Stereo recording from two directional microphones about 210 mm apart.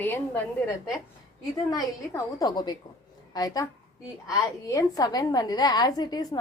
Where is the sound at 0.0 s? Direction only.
10° left (ahead or behind).